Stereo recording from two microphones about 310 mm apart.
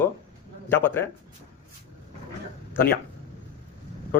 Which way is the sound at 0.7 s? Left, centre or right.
Centre.